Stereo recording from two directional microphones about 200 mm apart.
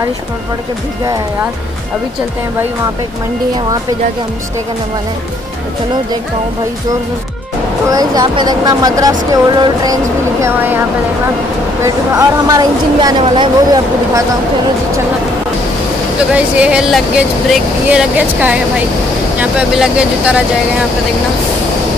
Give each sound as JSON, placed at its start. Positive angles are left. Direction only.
{"t": 7.9, "sound": "speech", "side_deg": -20}
{"t": 11.8, "sound": "speech", "side_deg": -15}
{"t": 16.3, "sound": "speech", "side_deg": -5}